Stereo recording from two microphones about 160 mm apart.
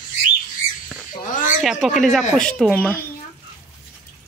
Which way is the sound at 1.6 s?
Centre (ahead or behind).